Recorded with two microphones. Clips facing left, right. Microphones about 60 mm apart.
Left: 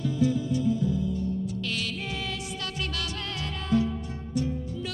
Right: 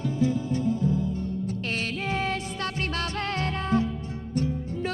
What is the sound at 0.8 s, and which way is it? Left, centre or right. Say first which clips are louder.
Music: right 1 dB; right.